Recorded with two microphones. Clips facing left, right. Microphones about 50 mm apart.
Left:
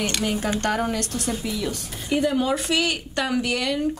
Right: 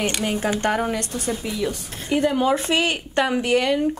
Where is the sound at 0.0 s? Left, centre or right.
Right.